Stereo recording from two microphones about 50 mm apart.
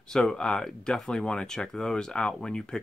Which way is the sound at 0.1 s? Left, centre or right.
Centre.